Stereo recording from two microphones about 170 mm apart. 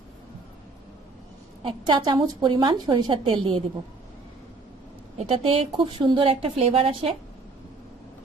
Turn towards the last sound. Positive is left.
turn(degrees=-35)  # may be behind; listen again after turning